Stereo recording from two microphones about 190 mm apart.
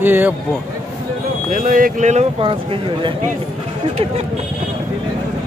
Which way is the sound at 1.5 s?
45° right (ahead or behind).